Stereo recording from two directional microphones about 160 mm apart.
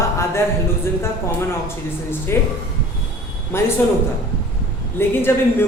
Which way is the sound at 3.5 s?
15° left (ahead or behind).